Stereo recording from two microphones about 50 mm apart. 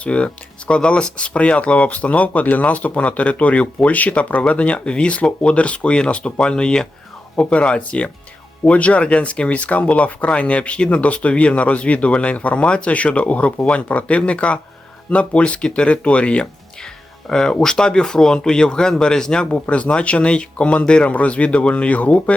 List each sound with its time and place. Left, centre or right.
0.0 s speech: left
16.8 s speech: centre
19.5 s speech: left